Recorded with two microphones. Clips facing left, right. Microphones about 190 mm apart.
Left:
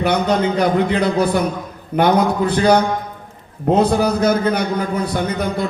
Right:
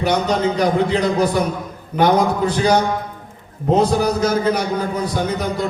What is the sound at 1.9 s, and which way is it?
Speech, 60° left (ahead or behind).